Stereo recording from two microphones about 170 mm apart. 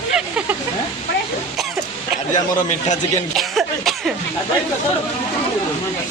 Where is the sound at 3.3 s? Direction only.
Centre (ahead or behind).